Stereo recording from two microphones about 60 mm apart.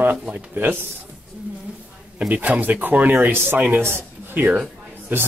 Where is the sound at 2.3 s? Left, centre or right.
Right.